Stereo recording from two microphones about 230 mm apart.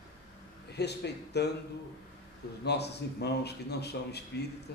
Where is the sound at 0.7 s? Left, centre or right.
Left.